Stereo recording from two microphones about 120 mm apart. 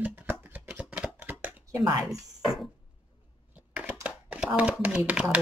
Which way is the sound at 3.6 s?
10° right (ahead or behind).